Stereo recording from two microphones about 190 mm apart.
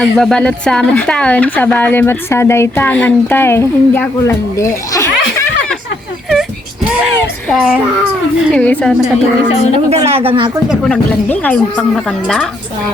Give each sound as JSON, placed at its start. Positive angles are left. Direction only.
{"t": 0.0, "sound": "speech", "side_deg": 5}
{"t": 7.5, "sound": "speech", "side_deg": -5}
{"t": 9.9, "sound": "speech", "side_deg": -30}
{"t": 10.7, "sound": "speech", "side_deg": 5}